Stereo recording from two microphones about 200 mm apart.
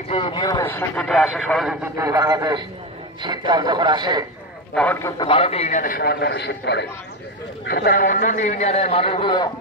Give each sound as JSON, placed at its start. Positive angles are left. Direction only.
{"t": 0.1, "sound": "a man's voice", "side_deg": 25}
{"t": 2.0, "sound": "a man's voice", "side_deg": -15}
{"t": 4.7, "sound": "speech", "side_deg": 10}
{"t": 5.2, "sound": "a man's voice", "side_deg": 30}